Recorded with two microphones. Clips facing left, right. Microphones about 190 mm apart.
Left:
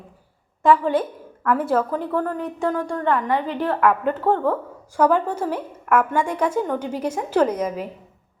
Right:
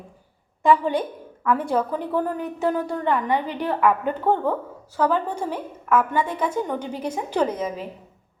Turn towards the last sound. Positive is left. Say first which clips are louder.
# left 3 dB
turn(degrees=5)  # may be behind; listen again after turning